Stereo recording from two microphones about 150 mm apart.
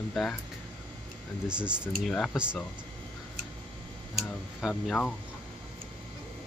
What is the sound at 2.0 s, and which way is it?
Speech, 5° left (ahead or behind).